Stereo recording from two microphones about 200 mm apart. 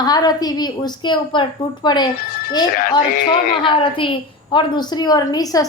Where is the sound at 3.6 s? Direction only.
25° left (ahead or behind).